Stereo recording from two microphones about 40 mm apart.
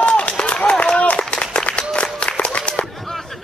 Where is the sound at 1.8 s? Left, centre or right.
Left.